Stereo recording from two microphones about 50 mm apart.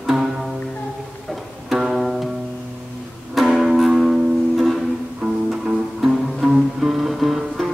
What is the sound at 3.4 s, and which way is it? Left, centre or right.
Music, centre.